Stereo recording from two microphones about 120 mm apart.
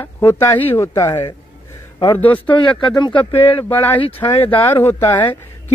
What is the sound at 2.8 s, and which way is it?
Speech, 40° left (ahead or behind).